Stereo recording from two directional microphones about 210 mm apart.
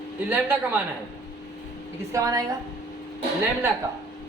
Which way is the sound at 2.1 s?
15° right (ahead or behind).